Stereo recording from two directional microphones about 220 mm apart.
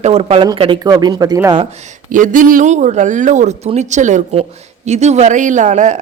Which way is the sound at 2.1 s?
35° right (ahead or behind).